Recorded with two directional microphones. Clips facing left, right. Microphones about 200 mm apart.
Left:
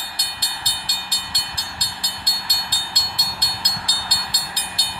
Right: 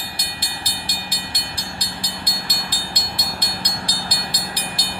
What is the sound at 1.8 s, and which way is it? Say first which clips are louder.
Train: right 5 dB; 55° right (ahead or behind).